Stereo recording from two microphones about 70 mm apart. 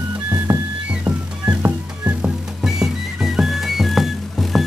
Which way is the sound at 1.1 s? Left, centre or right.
Centre.